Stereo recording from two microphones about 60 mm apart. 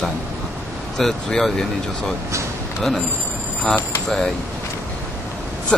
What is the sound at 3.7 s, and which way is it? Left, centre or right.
Speech, centre.